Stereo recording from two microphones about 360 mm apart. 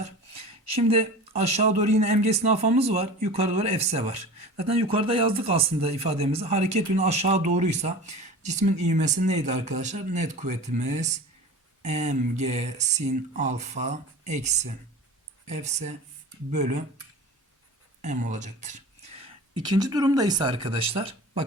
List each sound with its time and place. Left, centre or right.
0.0 s speech: centre
18.0 s speech: centre